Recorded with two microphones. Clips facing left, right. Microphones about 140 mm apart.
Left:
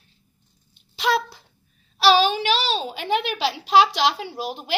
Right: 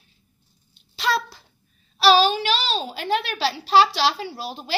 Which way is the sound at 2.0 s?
15° left (ahead or behind).